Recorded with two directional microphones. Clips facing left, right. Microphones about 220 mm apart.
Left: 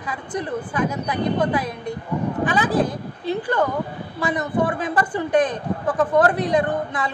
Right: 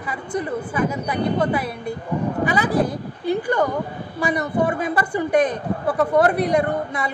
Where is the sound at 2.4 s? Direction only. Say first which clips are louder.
Even; 10° right (ahead or behind).